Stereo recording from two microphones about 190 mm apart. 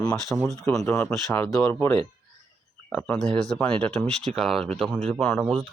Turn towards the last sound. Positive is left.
turn(degrees=0)  # may be behind; listen again after turning